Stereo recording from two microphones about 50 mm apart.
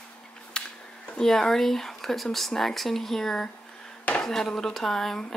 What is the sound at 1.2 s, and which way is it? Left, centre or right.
Speech, centre.